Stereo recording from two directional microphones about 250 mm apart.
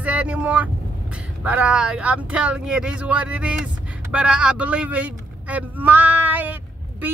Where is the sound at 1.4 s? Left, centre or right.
Centre.